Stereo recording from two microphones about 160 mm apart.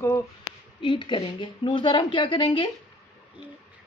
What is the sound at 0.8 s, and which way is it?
Speech, 30° left (ahead or behind).